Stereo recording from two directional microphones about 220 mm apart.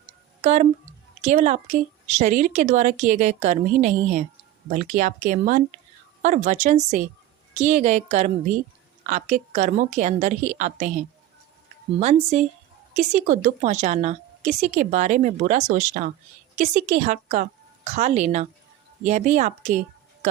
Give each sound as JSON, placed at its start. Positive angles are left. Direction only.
{"t": 0.4, "sound": "a woman's voice", "side_deg": -30}
{"t": 11.9, "sound": "a woman's voice", "side_deg": -30}